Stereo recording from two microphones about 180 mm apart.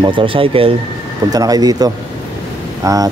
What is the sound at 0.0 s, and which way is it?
Speech, 30° right (ahead or behind).